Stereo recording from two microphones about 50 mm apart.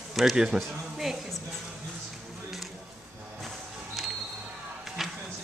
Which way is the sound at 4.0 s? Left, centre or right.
Centre.